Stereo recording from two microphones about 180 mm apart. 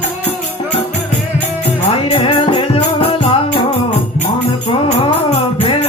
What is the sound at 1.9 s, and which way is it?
Music, 30° left (ahead or behind).